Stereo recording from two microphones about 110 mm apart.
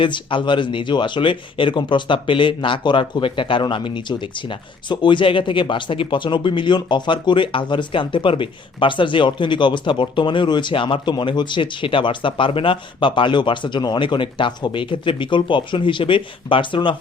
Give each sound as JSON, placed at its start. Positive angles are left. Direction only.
{"t": 0.0, "sound": "speech", "side_deg": 50}